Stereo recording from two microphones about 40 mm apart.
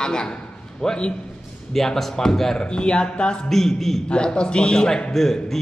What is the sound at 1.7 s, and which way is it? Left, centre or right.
Speech, centre.